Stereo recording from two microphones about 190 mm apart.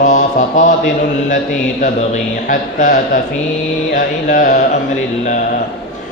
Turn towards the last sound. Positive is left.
turn(degrees=40)  # may be behind; listen again after turning